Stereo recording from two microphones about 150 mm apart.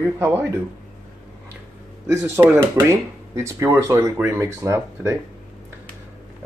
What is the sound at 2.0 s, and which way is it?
Speech, 15° right (ahead or behind).